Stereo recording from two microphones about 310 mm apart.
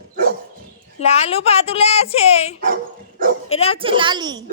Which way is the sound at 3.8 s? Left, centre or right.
Centre.